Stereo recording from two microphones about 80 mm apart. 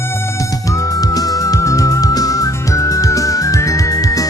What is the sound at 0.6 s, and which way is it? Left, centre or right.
Music, left.